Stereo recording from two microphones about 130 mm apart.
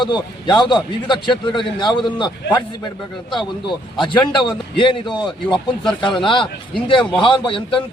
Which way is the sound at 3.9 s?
35° left (ahead or behind).